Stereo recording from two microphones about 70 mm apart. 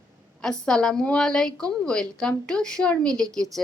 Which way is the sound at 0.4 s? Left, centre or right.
Centre.